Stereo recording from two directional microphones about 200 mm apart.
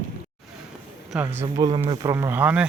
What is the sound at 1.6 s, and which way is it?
Speech, 20° right (ahead or behind).